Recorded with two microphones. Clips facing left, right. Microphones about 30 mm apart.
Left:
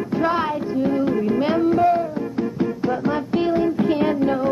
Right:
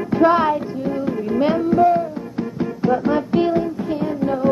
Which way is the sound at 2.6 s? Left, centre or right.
Centre.